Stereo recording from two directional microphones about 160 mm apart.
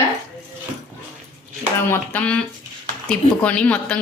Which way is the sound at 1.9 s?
10° left (ahead or behind).